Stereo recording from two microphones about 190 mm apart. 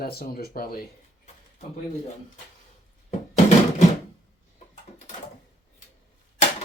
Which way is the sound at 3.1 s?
40° left (ahead or behind).